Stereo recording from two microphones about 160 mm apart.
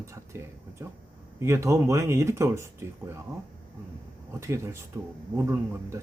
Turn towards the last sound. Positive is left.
turn(degrees=-15)  # may be behind; listen again after turning